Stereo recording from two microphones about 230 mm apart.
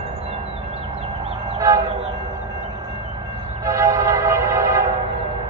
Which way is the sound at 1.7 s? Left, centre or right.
Centre.